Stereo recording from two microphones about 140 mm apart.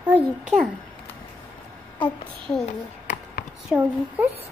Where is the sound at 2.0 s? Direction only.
5° left (ahead or behind).